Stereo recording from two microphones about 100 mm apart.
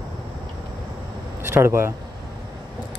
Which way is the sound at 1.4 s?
25° right (ahead or behind).